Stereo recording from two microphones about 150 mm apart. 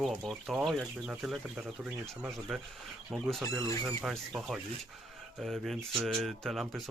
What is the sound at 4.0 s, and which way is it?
Speech, centre (ahead or behind).